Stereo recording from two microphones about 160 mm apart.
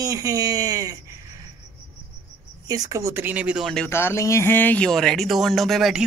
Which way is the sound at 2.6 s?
20° right (ahead or behind).